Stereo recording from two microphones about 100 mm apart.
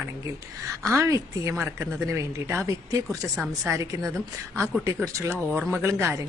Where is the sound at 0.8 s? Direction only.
30° right (ahead or behind).